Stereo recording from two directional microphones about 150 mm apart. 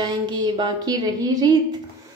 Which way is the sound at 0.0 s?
30° right (ahead or behind).